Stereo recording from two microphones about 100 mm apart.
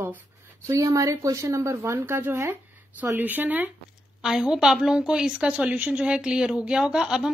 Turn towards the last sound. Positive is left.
turn(degrees=-5)  # may be behind; listen again after turning